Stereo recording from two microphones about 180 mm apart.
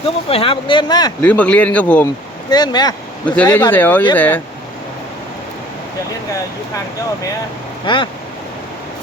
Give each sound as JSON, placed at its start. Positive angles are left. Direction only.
{"t": 0.0, "sound": "speech", "side_deg": 30}
{"t": 1.2, "sound": "speech", "side_deg": 5}
{"t": 2.5, "sound": "speech", "side_deg": 20}
{"t": 3.2, "sound": "speech", "side_deg": 10}
{"t": 7.9, "sound": "speech", "side_deg": 25}